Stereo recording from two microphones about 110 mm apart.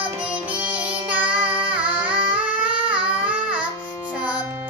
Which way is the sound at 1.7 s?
10° right (ahead or behind).